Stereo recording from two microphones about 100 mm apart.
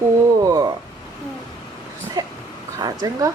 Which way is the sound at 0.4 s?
40° right (ahead or behind).